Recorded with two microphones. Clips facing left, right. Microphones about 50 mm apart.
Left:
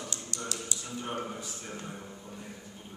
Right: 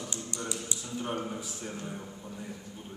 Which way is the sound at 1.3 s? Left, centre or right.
Centre.